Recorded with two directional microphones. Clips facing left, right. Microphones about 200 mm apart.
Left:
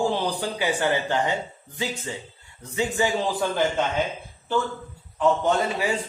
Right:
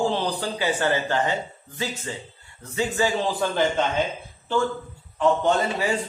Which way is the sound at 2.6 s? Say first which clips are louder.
Even; 15° left (ahead or behind).